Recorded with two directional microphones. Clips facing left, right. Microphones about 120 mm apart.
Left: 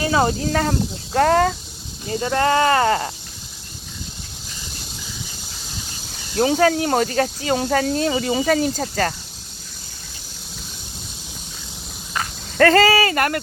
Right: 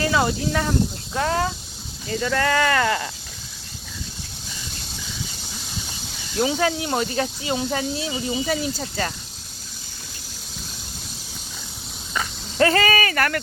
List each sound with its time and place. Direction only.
0.0 s speech: 30° left (ahead or behind)
1.1 s speech: 70° left (ahead or behind)
2.0 s speech: 30° left (ahead or behind)
6.3 s speech: 45° left (ahead or behind)
12.5 s speech: 50° left (ahead or behind)
12.8 s speech: 30° left (ahead or behind)